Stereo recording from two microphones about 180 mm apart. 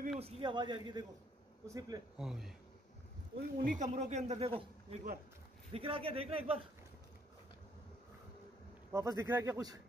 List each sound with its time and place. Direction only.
0.2 s a man's voice: 30° right (ahead or behind)
2.1 s speech: centre (ahead or behind)
3.3 s speech: 50° right (ahead or behind); by 6.6 s 30° right (ahead or behind)
8.9 s a man's voice: 15° right (ahead or behind)